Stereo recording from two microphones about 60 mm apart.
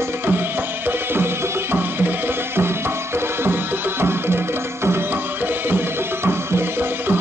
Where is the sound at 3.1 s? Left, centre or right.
Right.